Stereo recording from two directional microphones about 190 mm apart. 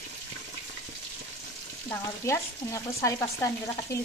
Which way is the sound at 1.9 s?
15° left (ahead or behind).